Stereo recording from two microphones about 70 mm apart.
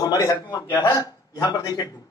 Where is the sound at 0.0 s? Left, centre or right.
Left.